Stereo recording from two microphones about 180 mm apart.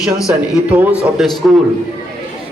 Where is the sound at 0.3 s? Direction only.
5° right (ahead or behind).